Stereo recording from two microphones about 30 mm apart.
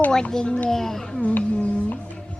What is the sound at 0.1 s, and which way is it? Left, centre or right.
Speech, left.